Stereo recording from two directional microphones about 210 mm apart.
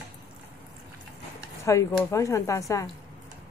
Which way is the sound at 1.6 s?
15° left (ahead or behind).